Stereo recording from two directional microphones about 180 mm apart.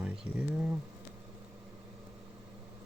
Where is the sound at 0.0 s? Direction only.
5° right (ahead or behind).